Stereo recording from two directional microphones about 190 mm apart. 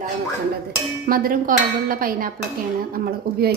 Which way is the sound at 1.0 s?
50° right (ahead or behind).